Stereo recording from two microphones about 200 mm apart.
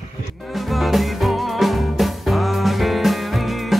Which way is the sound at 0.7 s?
Centre (ahead or behind).